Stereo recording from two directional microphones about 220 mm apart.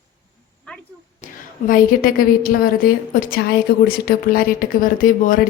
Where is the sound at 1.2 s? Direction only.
35° left (ahead or behind).